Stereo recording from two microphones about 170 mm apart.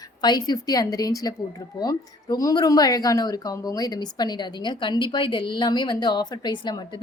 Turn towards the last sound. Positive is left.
turn(degrees=25)  # may be behind; listen again after turning